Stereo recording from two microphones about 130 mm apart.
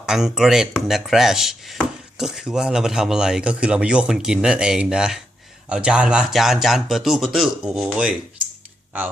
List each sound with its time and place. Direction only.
0.0 s speech: 5° right (ahead or behind)